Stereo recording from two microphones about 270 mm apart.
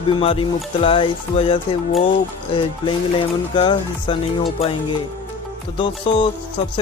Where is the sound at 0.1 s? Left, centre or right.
Centre.